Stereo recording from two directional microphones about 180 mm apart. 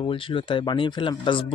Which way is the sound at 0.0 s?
30° left (ahead or behind).